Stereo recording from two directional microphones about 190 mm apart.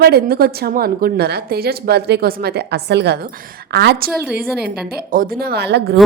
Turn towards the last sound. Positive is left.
turn(degrees=-60)  # may be behind; listen again after turning